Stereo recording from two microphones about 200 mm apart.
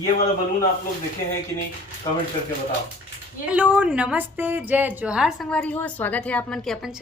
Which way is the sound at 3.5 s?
5° right (ahead or behind).